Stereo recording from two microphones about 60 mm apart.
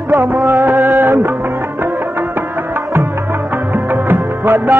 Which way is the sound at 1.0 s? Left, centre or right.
Right.